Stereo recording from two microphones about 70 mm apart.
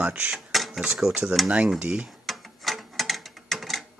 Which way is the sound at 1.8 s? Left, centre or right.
Centre.